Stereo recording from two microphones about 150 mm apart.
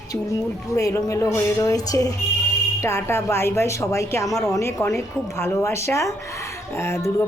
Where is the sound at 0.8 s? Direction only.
20° left (ahead or behind).